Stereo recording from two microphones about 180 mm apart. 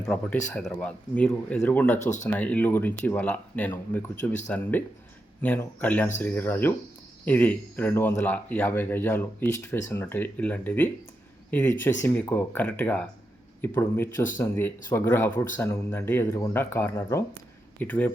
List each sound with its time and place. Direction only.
0.0 s speech: 5° left (ahead or behind)
2.0 s speech: 40° left (ahead or behind)
2.3 s speech: 10° left (ahead or behind)